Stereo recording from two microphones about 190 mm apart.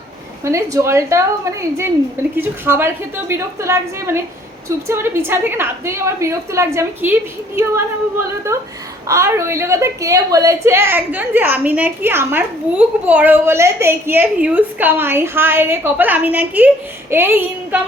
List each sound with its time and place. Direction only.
0.4 s a woman's voice: 15° right (ahead or behind)